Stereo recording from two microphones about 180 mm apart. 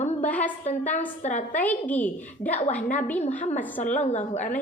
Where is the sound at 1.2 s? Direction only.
40° left (ahead or behind).